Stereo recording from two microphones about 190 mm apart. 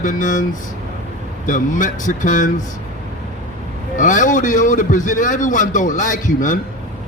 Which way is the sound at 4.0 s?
40° left (ahead or behind).